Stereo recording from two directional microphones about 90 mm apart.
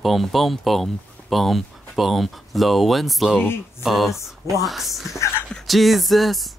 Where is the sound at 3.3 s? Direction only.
25° left (ahead or behind).